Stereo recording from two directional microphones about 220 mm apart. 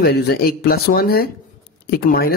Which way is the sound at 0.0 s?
45° left (ahead or behind).